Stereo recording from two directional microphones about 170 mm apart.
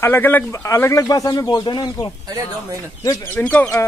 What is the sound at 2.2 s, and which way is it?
Speech, 20° right (ahead or behind).